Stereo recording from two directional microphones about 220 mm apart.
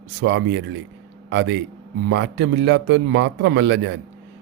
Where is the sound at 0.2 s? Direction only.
55° right (ahead or behind).